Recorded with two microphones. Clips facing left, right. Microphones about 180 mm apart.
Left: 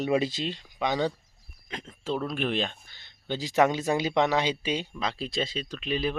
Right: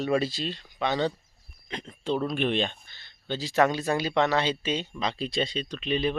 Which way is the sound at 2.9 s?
15° left (ahead or behind).